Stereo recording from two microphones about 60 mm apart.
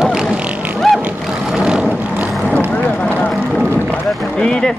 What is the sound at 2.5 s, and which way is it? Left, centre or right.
Vehicle, left.